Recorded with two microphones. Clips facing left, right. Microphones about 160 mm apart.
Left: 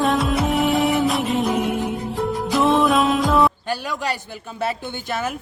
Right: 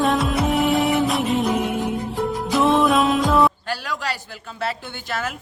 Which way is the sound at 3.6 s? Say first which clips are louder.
Left 2 dB; 20° left (ahead or behind).